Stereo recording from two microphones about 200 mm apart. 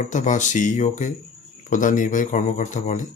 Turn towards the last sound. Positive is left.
turn(degrees=35)  # may be behind; listen again after turning